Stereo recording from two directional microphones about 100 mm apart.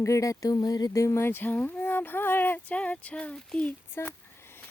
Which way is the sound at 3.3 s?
10° left (ahead or behind).